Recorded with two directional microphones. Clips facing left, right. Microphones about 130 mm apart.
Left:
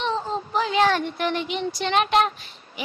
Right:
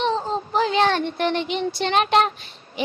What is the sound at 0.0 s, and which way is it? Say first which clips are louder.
Child singing: right 3 dB; 35° right (ahead or behind).